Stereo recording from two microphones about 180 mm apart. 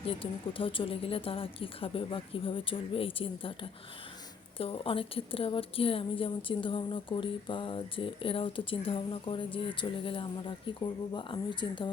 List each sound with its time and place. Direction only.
0.0 s a woman's voice: 30° left (ahead or behind)